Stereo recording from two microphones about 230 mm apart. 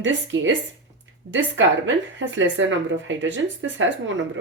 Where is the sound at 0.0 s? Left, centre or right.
Right.